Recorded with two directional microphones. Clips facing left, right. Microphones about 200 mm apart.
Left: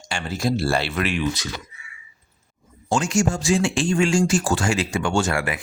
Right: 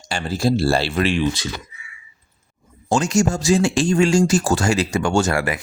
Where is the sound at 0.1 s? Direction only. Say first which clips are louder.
Right 4 dB; 35° right (ahead or behind).